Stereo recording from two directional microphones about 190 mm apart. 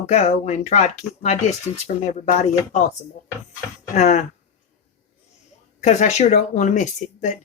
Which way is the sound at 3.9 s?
35° left (ahead or behind).